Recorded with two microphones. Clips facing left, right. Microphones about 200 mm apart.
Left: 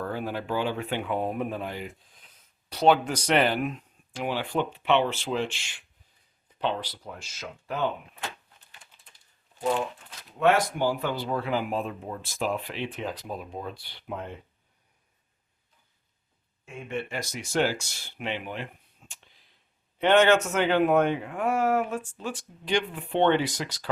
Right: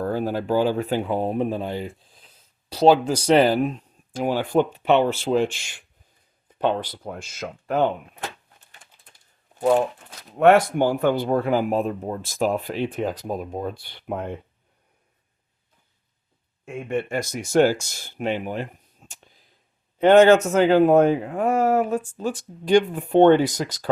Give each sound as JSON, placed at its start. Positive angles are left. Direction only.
{"t": 0.0, "sound": "speech", "side_deg": -40}
{"t": 9.6, "sound": "speech", "side_deg": -50}
{"t": 16.6, "sound": "speech", "side_deg": -50}